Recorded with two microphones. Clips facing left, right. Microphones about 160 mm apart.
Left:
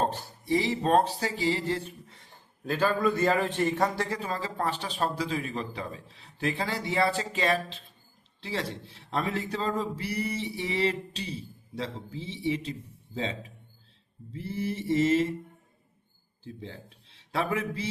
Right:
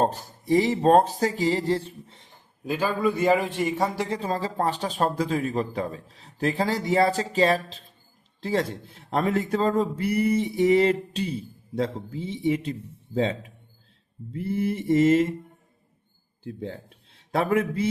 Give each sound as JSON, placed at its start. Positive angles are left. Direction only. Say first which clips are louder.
{"t": 0.0, "sound": "speech", "louder": "right 5 dB", "side_deg": -40}
{"t": 2.6, "sound": "a man's voice", "louder": "right 1 dB", "side_deg": -10}
{"t": 4.1, "sound": "speech", "louder": "right 5 dB", "side_deg": -35}
{"t": 14.3, "sound": "speech", "louder": "right 6 dB", "side_deg": -55}
{"t": 16.4, "sound": "a man's voice", "louder": "right 7 dB", "side_deg": -50}